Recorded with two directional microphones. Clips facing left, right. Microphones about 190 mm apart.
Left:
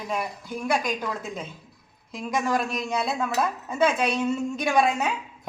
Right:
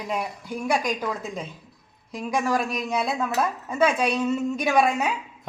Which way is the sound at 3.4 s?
5° left (ahead or behind).